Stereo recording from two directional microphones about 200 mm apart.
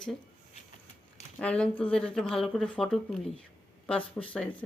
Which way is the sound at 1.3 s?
5° left (ahead or behind).